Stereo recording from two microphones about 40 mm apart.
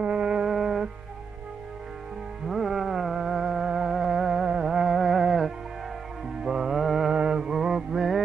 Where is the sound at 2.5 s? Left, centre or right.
Centre.